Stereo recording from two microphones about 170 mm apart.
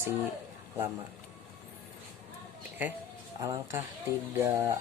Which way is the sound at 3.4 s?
20° right (ahead or behind).